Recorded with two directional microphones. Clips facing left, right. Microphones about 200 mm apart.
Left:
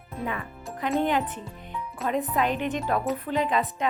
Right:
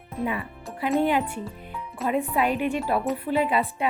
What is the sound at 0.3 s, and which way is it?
Speech, 10° right (ahead or behind).